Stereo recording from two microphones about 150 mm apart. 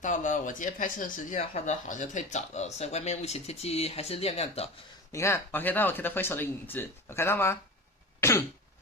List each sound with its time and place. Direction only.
0.0 s speech: 55° left (ahead or behind)
5.1 s speech: 15° left (ahead or behind)
8.2 s cough: 20° left (ahead or behind)